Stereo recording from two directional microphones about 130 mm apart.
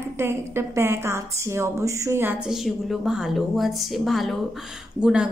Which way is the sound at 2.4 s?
Centre (ahead or behind).